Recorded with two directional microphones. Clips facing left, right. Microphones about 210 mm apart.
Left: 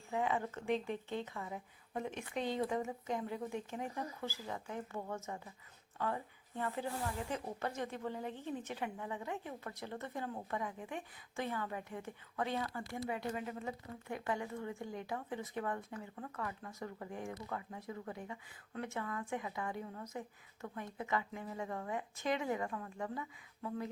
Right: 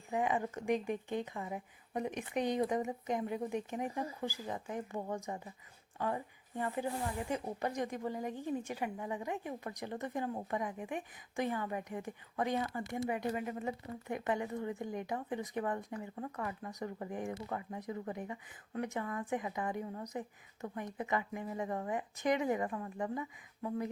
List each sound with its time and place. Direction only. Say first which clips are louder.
0.1 s speech: right 2 dB; 15° right (ahead or behind)